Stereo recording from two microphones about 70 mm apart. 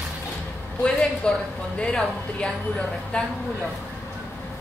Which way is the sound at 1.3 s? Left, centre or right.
Centre.